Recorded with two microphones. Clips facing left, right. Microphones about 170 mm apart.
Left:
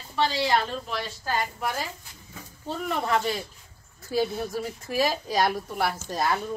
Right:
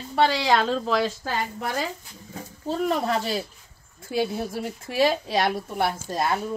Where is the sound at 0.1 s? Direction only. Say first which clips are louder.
Right 3 dB; 70° right (ahead or behind); by 1.3 s 90° right.